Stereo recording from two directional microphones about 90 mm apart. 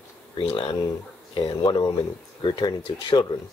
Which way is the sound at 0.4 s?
75° left (ahead or behind).